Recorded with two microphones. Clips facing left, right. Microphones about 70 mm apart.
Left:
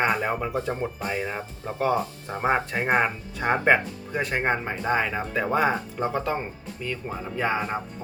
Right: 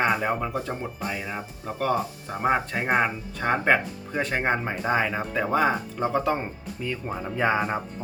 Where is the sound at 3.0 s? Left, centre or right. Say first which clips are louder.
Even; centre.